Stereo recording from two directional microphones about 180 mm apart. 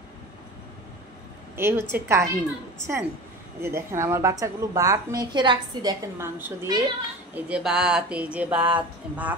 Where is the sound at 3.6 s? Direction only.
15° right (ahead or behind).